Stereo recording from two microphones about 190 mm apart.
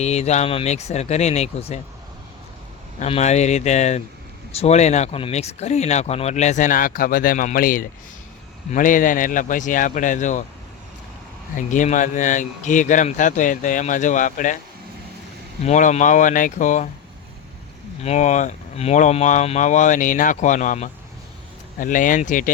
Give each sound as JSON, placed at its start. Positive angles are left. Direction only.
{"t": 0.0, "sound": "speech", "side_deg": 35}
{"t": 3.0, "sound": "a man's voice", "side_deg": 35}
{"t": 11.5, "sound": "speech", "side_deg": 40}
{"t": 15.6, "sound": "speech", "side_deg": 40}
{"t": 18.0, "sound": "a man's voice", "side_deg": 35}